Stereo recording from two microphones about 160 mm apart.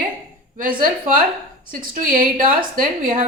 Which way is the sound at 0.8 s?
60° right (ahead or behind).